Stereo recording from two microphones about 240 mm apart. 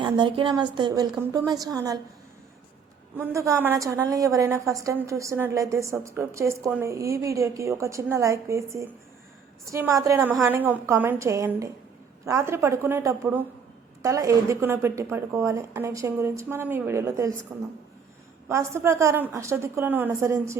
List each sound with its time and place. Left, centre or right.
0.0 s a woman's voice: centre
3.2 s a woman's voice: centre
18.4 s a woman's voice: centre